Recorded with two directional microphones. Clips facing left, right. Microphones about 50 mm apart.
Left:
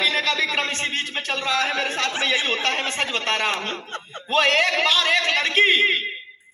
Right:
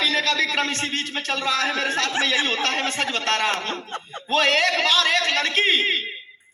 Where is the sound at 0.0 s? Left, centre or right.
Left.